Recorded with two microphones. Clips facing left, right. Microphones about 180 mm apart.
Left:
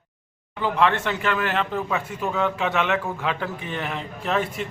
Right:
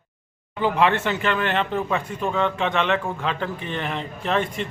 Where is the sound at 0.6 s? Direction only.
5° right (ahead or behind).